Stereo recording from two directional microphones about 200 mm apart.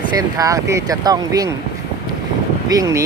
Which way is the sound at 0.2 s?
15° right (ahead or behind).